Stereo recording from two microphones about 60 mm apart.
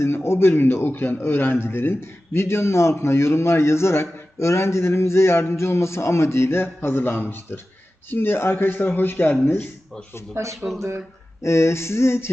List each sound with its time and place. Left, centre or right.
0.0 s a man's voice: left
10.3 s speech: right
11.4 s a man's voice: left